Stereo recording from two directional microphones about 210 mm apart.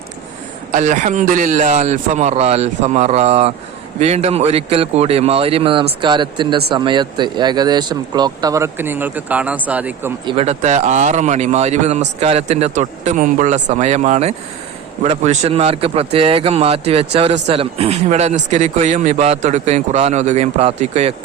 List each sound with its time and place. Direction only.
0.7 s a man's voice: 35° right (ahead or behind); by 10.1 s 5° right (ahead or behind)
10.2 s a man's voice: 30° right (ahead or behind)